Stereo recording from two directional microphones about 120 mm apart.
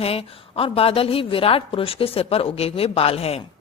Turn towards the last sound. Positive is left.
turn(degrees=55)  # may be behind; listen again after turning